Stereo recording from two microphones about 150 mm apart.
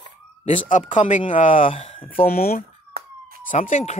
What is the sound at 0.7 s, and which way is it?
Speech, 55° left (ahead or behind).